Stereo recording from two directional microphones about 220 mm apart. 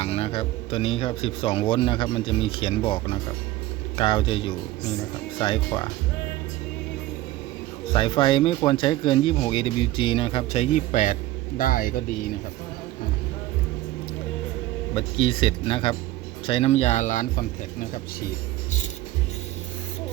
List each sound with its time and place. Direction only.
0.0 s speech: 25° left (ahead or behind)
7.9 s speech: 25° left (ahead or behind); by 12.0 s 40° left (ahead or behind)
14.9 s speech: 25° left (ahead or behind); by 18.3 s 40° left (ahead or behind)